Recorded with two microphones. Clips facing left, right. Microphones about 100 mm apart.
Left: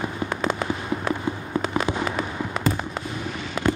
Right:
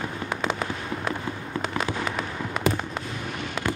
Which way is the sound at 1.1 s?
15° left (ahead or behind).